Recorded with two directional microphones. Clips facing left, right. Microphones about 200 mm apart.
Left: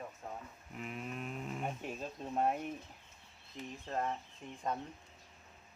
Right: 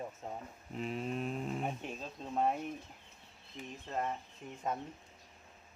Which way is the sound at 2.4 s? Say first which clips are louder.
Right 1 dB; 5° left (ahead or behind).